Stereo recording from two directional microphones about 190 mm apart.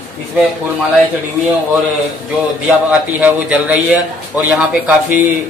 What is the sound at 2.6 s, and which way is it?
A man's voice, 5° right (ahead or behind).